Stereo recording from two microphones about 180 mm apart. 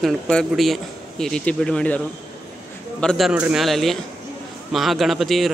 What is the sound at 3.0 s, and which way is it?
Speech, centre (ahead or behind).